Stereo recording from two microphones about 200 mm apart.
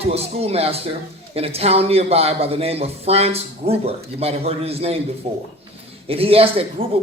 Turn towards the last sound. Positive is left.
turn(degrees=-30)  # may be behind; listen again after turning